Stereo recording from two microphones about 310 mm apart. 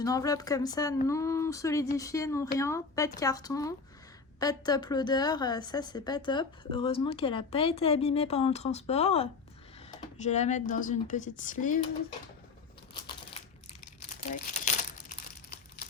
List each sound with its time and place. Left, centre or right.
0.0 s a woman's voice: centre
12.9 s a sound: centre
14.1 s crumpling: left